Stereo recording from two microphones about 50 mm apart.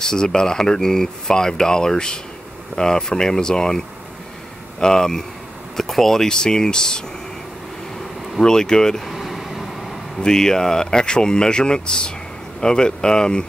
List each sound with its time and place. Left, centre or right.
0.0 s speech: centre
8.4 s speech: centre
9.0 s vehicle: centre
10.2 s speech: centre